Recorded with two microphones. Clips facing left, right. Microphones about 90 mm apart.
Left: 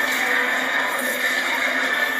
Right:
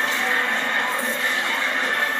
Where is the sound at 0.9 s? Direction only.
55° left (ahead or behind).